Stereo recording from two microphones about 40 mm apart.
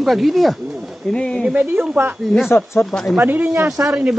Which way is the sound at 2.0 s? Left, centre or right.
Right.